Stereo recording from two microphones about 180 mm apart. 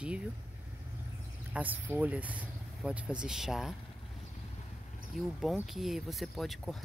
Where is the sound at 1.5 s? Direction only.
10° right (ahead or behind).